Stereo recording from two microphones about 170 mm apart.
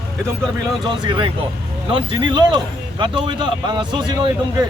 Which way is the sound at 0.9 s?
30° right (ahead or behind).